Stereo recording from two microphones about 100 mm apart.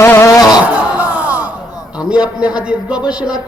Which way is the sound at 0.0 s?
30° left (ahead or behind).